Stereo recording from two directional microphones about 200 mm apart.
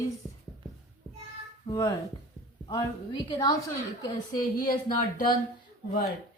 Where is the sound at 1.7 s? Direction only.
20° left (ahead or behind).